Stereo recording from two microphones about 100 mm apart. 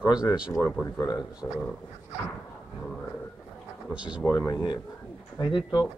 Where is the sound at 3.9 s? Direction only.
10° right (ahead or behind).